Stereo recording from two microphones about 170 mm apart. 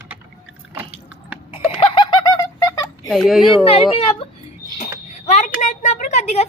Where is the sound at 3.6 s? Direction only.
35° left (ahead or behind).